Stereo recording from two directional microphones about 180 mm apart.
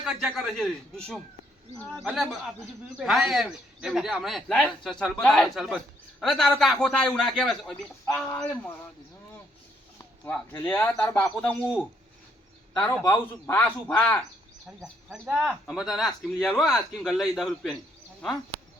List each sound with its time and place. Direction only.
0.0 s a man's voice: 5° right (ahead or behind)
8.0 s a man's voice: 15° left (ahead or behind)
10.2 s a man's voice: 10° left (ahead or behind)
14.8 s a man's voice: 5° right (ahead or behind)